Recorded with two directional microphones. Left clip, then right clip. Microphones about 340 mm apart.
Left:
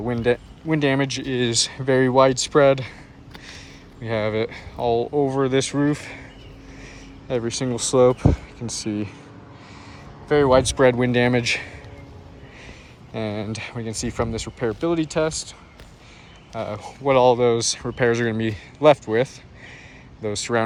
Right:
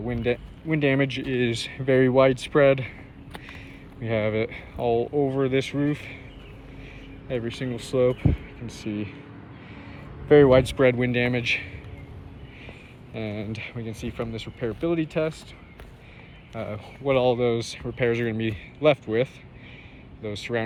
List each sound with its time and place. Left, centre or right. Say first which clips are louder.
0.1 s speech: left 5 dB; left
0.7 s speech: left 2 dB; centre
3.3 s a sound: left 1 dB; centre
4.0 s speech: left 2 dB; centre
6.0 s speech: left 3 dB; left
7.3 s speech: left 5 dB; centre
10.2 s speech: right 1 dB; centre
11.1 s speech: left 4 dB; left
13.1 s speech: left 5 dB; centre
16.6 s speech: left 5 dB; centre
18.3 s speech: left 4 dB; left
18.5 s speech: left 6 dB; centre